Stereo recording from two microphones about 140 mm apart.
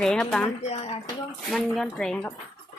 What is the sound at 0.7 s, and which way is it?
Speech, 50° left (ahead or behind).